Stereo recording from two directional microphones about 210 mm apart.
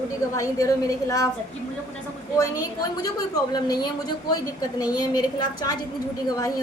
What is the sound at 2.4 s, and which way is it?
A woman's voice, 15° left (ahead or behind).